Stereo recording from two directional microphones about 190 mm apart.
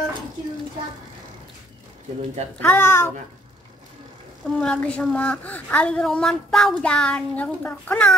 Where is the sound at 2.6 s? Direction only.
10° left (ahead or behind).